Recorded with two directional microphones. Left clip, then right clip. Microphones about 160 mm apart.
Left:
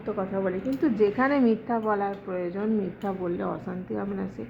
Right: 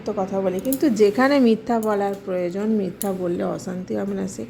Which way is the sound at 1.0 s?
40° right (ahead or behind).